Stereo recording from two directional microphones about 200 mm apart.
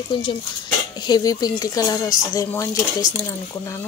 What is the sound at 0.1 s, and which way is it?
Speech, 25° left (ahead or behind).